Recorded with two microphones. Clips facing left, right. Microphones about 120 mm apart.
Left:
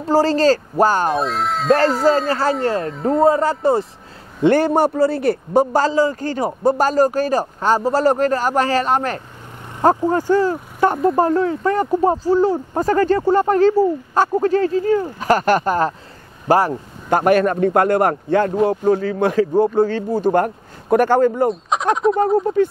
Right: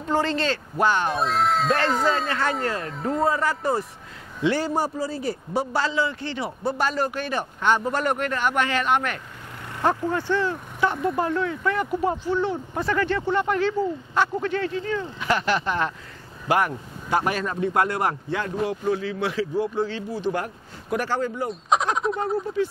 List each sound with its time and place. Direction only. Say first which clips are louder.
0.0 s speech: left 9 dB; 35° left (ahead or behind)
1.1 s speech: left 2 dB; centre (ahead or behind)
2.2 s speech: left 7 dB; 35° left (ahead or behind)
2.9 s speech: left 7 dB; centre (ahead or behind)
3.2 s speech: left 8 dB; 30° left (ahead or behind)
4.4 s a man's voice: left 9 dB; 55° left (ahead or behind)
5.5 s a man's voice: left 9 dB; 45° left (ahead or behind)
17.1 s a man's voice: left 10 dB; 55° left (ahead or behind)
21.5 s speech: left 3 dB; centre (ahead or behind)
22.1 s a man's voice: left 9 dB; 50° left (ahead or behind)